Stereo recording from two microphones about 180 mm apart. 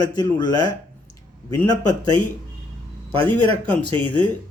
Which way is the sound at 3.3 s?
10° left (ahead or behind).